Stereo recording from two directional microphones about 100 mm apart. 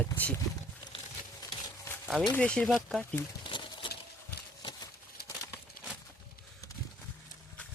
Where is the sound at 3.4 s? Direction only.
50° left (ahead or behind).